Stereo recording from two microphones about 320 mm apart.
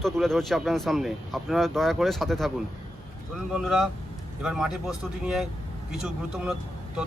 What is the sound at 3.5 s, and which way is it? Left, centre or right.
Speech, centre.